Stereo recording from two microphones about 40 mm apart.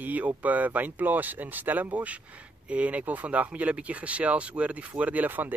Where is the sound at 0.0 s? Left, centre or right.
Right.